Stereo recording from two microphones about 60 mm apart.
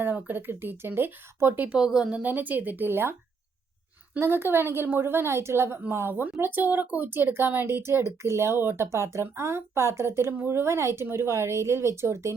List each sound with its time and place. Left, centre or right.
0.0 s a woman's voice: right
1.7 s speech: centre
2.2 s a woman's voice: right
4.2 s a woman's voice: right